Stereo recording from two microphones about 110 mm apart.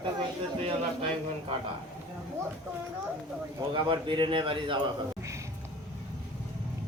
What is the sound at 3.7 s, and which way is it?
Speech, 45° right (ahead or behind).